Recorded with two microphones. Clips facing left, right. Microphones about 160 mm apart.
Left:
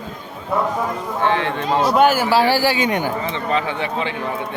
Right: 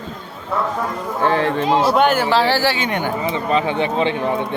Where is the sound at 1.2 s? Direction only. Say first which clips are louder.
Right 3 dB; 40° right (ahead or behind).